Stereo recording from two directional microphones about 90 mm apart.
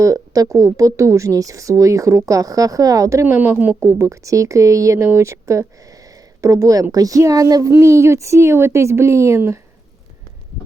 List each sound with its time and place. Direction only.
0.0 s a woman's voice: 35° right (ahead or behind)
3.3 s a woman's voice: 25° right (ahead or behind)
3.8 s a woman's voice: 35° right (ahead or behind)